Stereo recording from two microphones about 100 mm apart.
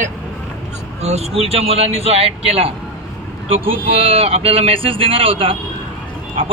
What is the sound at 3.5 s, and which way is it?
A man's voice, 65° right (ahead or behind).